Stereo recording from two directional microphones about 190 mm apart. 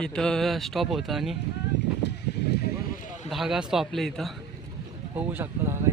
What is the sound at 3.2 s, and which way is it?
Speech, centre (ahead or behind).